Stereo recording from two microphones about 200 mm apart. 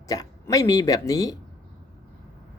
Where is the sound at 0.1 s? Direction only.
15° left (ahead or behind).